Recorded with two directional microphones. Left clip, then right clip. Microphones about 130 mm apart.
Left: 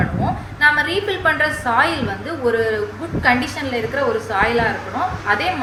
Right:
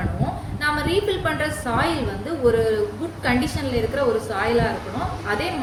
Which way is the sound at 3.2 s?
35° right (ahead or behind).